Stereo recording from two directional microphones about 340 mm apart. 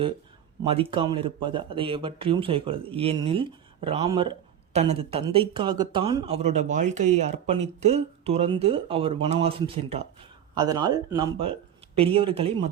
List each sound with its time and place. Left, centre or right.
0.6 s speech: centre